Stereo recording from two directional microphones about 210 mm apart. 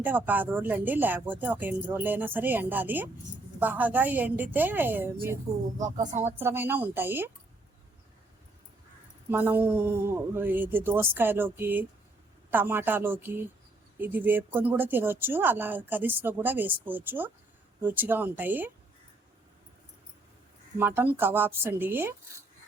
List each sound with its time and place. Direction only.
0.0 s speech: 10° right (ahead or behind)
9.3 s speech: 10° right (ahead or behind)
20.7 s speech: 10° right (ahead or behind)